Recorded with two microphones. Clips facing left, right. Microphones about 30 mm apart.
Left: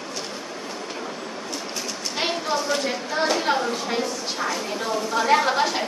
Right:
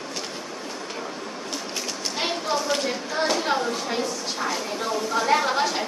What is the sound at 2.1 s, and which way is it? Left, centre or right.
Speech, centre.